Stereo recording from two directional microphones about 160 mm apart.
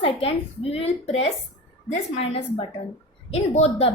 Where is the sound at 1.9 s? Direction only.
45° left (ahead or behind).